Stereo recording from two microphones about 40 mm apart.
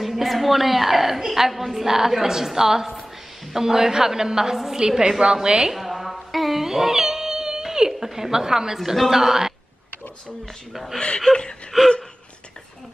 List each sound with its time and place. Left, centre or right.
0.0 s a woman's voice: centre
5.7 s music: centre
8.7 s a woman's voice: centre
10.7 s a woman's voice: centre
11.0 s speech: left
11.7 s a woman's voice: centre